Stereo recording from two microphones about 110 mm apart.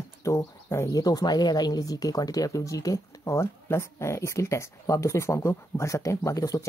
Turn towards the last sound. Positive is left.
turn(degrees=30)  # may be behind; listen again after turning